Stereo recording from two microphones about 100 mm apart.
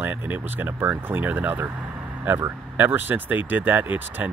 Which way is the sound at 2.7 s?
20° right (ahead or behind).